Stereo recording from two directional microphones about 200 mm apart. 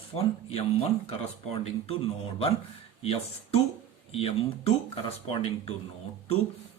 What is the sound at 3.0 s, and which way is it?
Speech, 30° left (ahead or behind).